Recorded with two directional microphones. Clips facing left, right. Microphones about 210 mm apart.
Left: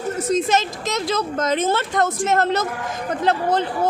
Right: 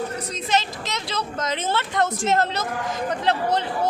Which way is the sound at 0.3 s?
45° left (ahead or behind).